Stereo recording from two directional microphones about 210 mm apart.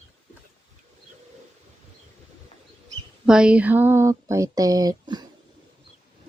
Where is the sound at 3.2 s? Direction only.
5° right (ahead or behind).